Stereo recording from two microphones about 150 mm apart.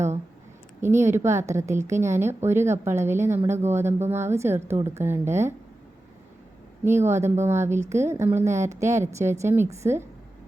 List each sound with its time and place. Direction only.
0.8 s a woman's voice: 15° right (ahead or behind)
7.1 s a woman's voice: 15° right (ahead or behind)